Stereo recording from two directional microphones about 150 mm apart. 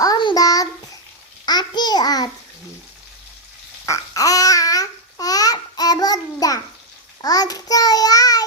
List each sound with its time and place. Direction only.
0.0 s child singing: 30° left (ahead or behind)
1.5 s babbling: 30° left (ahead or behind)
3.8 s babbling: 20° left (ahead or behind)
7.2 s child singing: 25° left (ahead or behind)